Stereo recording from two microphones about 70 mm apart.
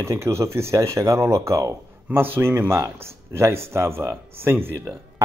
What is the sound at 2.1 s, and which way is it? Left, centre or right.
A man's voice, right.